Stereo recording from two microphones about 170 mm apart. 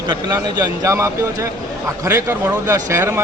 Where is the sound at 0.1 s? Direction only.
20° right (ahead or behind).